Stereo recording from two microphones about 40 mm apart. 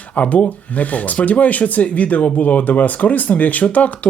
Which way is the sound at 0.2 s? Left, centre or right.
Left.